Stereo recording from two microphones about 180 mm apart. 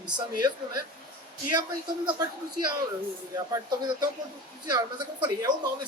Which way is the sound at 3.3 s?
20° right (ahead or behind).